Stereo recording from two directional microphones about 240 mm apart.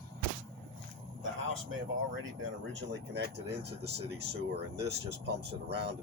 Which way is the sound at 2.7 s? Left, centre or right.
Right.